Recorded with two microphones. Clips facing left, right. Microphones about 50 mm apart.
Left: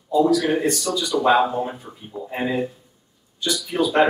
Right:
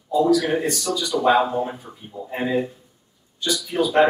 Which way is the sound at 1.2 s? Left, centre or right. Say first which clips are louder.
Even; centre.